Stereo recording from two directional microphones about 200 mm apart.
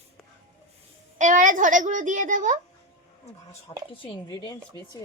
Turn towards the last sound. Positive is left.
turn(degrees=25)  # may be behind; listen again after turning